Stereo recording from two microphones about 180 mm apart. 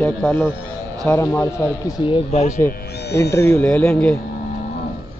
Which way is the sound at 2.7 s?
65° left (ahead or behind).